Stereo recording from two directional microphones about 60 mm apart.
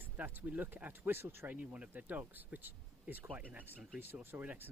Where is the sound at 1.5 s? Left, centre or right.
Right.